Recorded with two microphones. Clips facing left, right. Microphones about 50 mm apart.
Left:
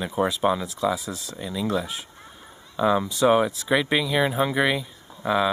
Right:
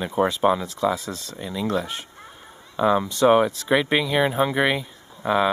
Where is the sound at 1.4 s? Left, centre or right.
Centre.